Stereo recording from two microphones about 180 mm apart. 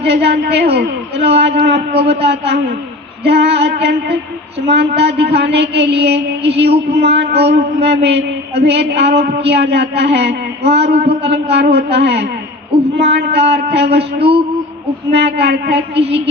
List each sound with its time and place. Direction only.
0.0 s mantra: 65° right (ahead or behind)
10.9 s a man's voice: 35° right (ahead or behind)
11.2 s mantra: 70° right (ahead or behind)
15.1 s mantra: 70° right (ahead or behind)